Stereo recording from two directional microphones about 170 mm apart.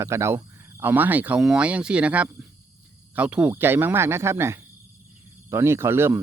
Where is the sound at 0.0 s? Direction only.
15° right (ahead or behind).